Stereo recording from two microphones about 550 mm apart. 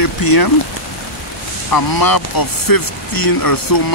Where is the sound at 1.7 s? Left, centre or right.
Left.